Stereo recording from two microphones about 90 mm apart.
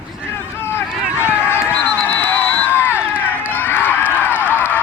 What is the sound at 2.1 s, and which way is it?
Crowd, 20° left (ahead or behind).